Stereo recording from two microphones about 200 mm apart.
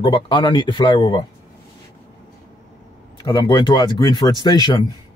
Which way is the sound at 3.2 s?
25° left (ahead or behind).